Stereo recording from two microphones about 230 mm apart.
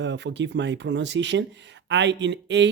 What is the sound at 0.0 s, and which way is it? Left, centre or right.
Speech, right.